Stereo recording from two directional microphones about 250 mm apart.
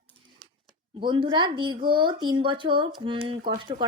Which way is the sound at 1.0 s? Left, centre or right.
Centre.